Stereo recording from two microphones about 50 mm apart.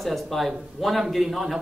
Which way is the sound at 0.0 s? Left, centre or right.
Centre.